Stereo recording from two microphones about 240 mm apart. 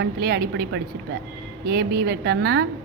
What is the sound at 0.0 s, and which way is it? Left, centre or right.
A woman's voice, right.